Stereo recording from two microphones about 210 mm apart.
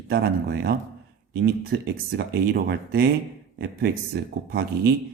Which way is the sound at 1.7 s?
50° right (ahead or behind).